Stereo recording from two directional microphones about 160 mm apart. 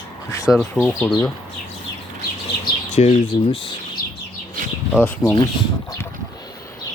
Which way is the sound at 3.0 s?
40° left (ahead or behind).